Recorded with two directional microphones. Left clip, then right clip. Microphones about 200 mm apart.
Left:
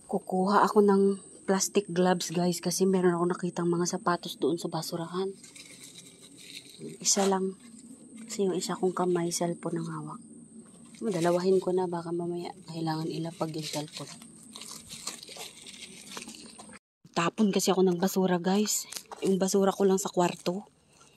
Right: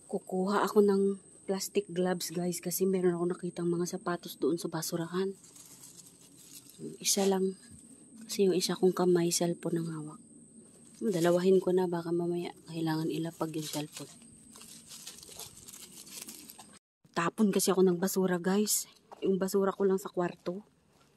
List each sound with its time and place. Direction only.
0.1 s a woman's voice: 5° right (ahead or behind); by 5.3 s 25° right (ahead or behind)
7.2 s speech: 30° right (ahead or behind)
11.1 s speech: 30° right (ahead or behind)
17.1 s a woman's voice: 10° right (ahead or behind)